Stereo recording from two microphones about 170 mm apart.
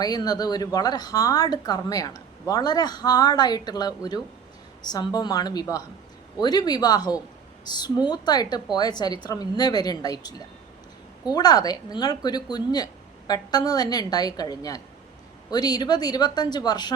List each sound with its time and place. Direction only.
0.0 s speech: 20° left (ahead or behind)